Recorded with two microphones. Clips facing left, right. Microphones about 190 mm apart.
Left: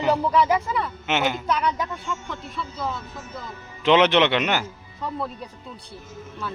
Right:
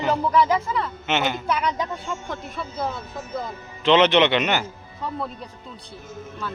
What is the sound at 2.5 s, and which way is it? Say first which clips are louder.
Speech: right 1 dB; 55° right (ahead or behind).